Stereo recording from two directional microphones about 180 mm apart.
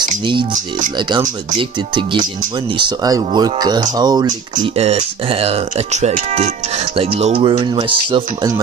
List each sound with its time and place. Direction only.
1.1 s speech: 25° right (ahead or behind)
4.7 s speech: 35° right (ahead or behind)